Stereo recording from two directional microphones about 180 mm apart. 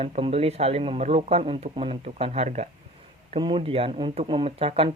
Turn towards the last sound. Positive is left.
turn(degrees=-35)  # may be behind; listen again after turning